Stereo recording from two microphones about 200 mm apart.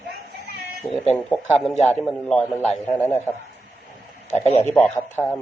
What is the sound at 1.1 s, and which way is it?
A man's voice, 10° left (ahead or behind).